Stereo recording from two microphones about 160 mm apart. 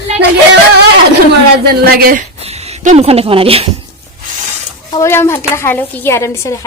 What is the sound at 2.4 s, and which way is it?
Speech, 40° right (ahead or behind).